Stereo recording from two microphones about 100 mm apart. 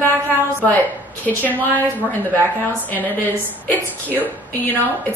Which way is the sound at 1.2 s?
15° left (ahead or behind).